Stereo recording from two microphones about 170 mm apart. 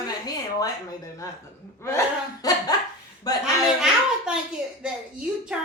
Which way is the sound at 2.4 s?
20° left (ahead or behind).